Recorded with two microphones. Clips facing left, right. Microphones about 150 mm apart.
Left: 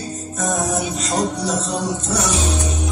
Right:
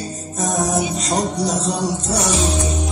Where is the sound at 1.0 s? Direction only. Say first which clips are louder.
Right 1 dB; 35° right (ahead or behind).